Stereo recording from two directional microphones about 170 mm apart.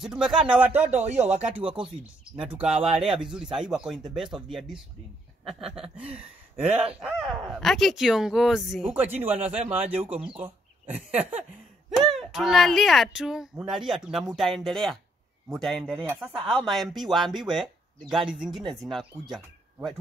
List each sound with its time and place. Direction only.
0.0 s speech: 5° right (ahead or behind)
0.8 s speech: 45° right (ahead or behind)
1.5 s a man's voice: 5° right (ahead or behind)
2.9 s speech: 5° right (ahead or behind)
5.4 s chuckle: centre (ahead or behind)
6.1 s a man's voice: 10° right (ahead or behind)
11.1 s a man's voice: 10° right (ahead or behind)